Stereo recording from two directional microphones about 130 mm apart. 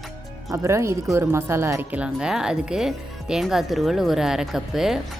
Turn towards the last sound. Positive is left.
turn(degrees=-5)  # may be behind; listen again after turning